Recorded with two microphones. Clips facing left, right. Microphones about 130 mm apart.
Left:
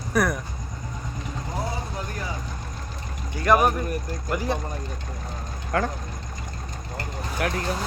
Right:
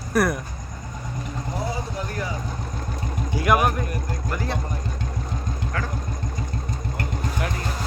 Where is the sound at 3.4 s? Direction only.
5° right (ahead or behind).